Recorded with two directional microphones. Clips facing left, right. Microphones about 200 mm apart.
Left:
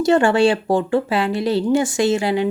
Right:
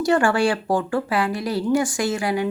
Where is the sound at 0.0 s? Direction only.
25° left (ahead or behind).